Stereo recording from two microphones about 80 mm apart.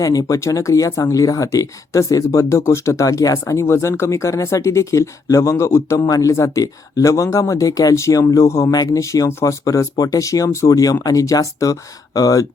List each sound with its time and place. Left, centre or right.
0.0 s speech: left